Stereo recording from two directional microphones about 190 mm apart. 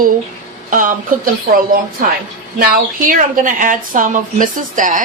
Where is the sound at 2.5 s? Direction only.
45° right (ahead or behind).